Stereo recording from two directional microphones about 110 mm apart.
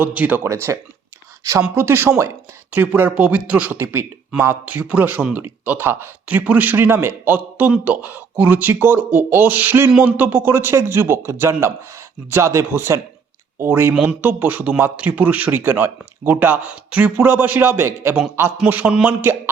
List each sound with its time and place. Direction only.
0.0 s speech: 15° right (ahead or behind)
13.9 s speech: 10° right (ahead or behind)
14.2 s speech: 20° right (ahead or behind)